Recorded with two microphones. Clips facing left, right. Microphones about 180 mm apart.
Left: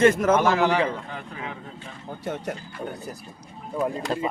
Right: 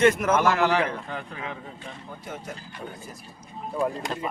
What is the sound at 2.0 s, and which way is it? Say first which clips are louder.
Speech: left 9 dB; 70° left (ahead or behind).